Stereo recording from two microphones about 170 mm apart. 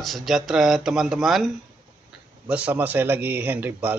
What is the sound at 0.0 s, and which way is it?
Speech, centre (ahead or behind).